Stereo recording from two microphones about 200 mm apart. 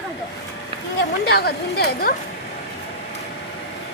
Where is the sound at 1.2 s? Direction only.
50° left (ahead or behind).